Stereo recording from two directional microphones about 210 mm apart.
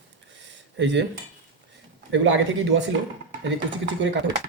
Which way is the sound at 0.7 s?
60° right (ahead or behind).